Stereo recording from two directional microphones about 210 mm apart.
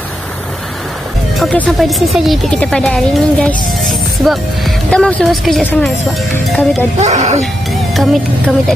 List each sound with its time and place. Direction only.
1.4 s speech: centre (ahead or behind)
7.0 s speech: 35° right (ahead or behind)
7.9 s speech: centre (ahead or behind)